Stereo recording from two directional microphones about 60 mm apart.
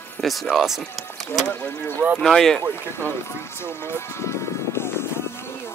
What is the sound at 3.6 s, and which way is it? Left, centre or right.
Music, left.